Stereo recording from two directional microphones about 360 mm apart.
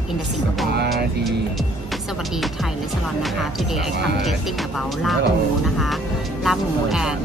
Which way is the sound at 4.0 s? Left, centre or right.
Right.